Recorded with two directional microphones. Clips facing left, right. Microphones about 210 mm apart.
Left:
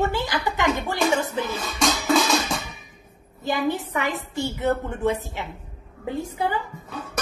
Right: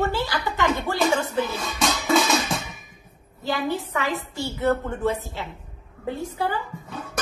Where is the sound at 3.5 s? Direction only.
15° left (ahead or behind).